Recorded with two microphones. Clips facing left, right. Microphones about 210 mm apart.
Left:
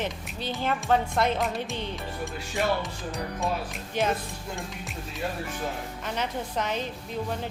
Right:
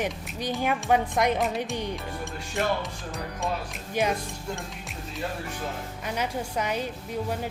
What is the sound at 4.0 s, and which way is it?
Speech, 10° right (ahead or behind).